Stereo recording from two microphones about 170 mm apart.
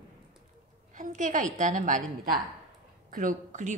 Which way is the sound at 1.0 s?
50° right (ahead or behind).